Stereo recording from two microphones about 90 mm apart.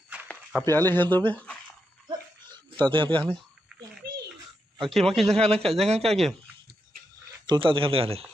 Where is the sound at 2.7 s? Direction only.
65° right (ahead or behind).